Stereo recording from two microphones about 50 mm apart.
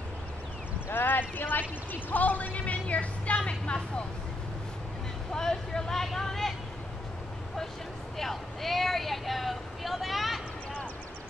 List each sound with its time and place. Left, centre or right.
0.8 s speech: left
5.3 s speech: centre
8.2 s speech: centre